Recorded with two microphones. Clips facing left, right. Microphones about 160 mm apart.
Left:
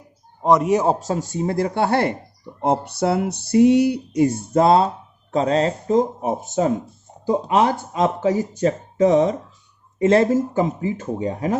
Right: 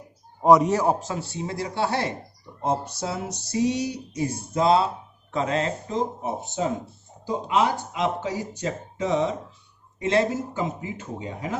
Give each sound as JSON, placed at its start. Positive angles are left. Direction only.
{"t": 0.4, "sound": "a man's voice", "side_deg": -5}
{"t": 0.7, "sound": "a man's voice", "side_deg": 20}
{"t": 0.9, "sound": "speech", "side_deg": 40}
{"t": 2.6, "sound": "a sound", "side_deg": 65}
{"t": 5.3, "sound": "speech", "side_deg": 35}
{"t": 6.4, "sound": "speech", "side_deg": 45}